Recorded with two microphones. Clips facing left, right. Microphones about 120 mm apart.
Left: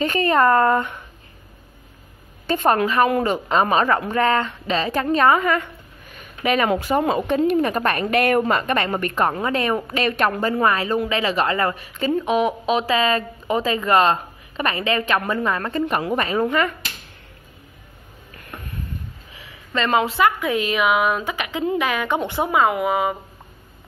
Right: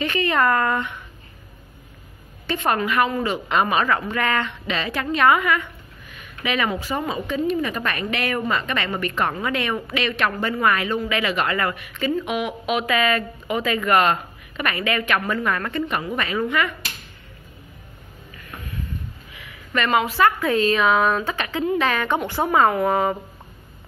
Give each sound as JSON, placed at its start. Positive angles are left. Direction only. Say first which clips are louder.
{"t": 0.0, "sound": "a woman's voice", "louder": "left 3 dB", "side_deg": 40}
{"t": 2.4, "sound": "a woman's voice", "louder": "left 4 dB", "side_deg": 45}
{"t": 3.4, "sound": "a woman's voice", "louder": "left 1 dB", "side_deg": 35}
{"t": 5.1, "sound": "a sound", "louder": "left 1 dB", "side_deg": 35}
{"t": 6.7, "sound": "a woman's voice", "louder": "left 6 dB", "side_deg": 55}
{"t": 10.4, "sound": "a woman's voice", "louder": "left 2 dB", "side_deg": 30}
{"t": 19.3, "sound": "a sound", "louder": "even", "side_deg": 25}
{"t": 20.2, "sound": "a woman's voice", "louder": "right 1 dB", "side_deg": 15}